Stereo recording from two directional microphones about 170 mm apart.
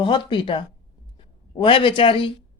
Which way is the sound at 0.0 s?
30° left (ahead or behind).